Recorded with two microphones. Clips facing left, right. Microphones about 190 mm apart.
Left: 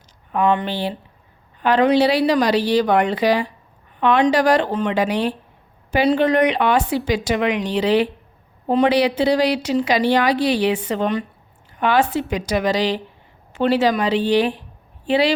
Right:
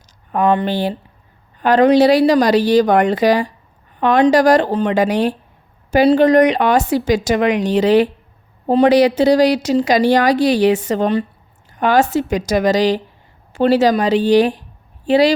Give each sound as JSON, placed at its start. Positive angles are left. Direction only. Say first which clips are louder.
{"t": 0.3, "sound": "a woman's voice", "louder": "right 3 dB", "side_deg": -40}